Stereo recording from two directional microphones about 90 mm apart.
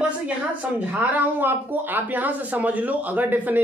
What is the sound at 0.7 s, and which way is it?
Speech, 15° right (ahead or behind).